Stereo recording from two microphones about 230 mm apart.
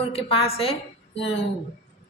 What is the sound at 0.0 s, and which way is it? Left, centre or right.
Speech, left.